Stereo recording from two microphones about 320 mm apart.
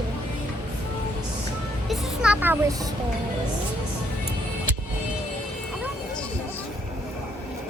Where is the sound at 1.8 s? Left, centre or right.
Centre.